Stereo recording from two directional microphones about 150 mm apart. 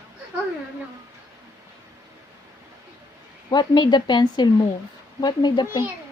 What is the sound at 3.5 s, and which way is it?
A woman's voice, 30° left (ahead or behind).